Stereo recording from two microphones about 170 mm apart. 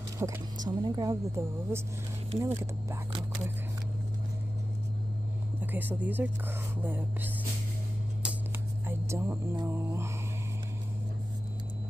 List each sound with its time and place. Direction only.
0.2 s speech: 20° right (ahead or behind)
5.6 s speech: 10° right (ahead or behind)
8.8 s speech: 15° right (ahead or behind)